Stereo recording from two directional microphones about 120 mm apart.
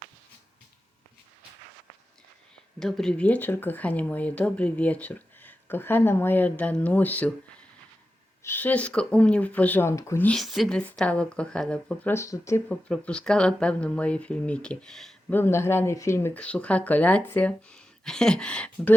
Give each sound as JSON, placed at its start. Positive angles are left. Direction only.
{"t": 2.7, "sound": "speech", "side_deg": 5}
{"t": 8.4, "sound": "speech", "side_deg": 15}
{"t": 10.2, "sound": "speech", "side_deg": 0}
{"t": 12.1, "sound": "speech", "side_deg": 25}
{"t": 12.6, "sound": "speech", "side_deg": 10}
{"t": 15.3, "sound": "speech", "side_deg": 20}